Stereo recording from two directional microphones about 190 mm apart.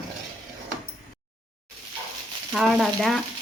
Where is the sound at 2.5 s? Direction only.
Centre (ahead or behind).